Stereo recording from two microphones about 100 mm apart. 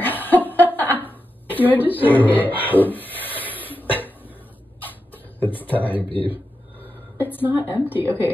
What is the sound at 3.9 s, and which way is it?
Cough, 20° left (ahead or behind).